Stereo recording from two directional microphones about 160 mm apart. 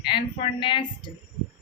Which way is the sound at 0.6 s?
30° left (ahead or behind).